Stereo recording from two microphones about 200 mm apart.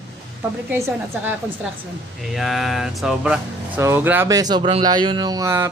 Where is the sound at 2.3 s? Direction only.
Centre (ahead or behind).